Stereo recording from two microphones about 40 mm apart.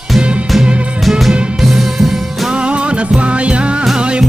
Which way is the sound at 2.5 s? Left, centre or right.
Right.